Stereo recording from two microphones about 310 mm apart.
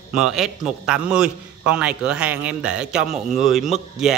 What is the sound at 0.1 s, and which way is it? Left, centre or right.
A man's voice, centre.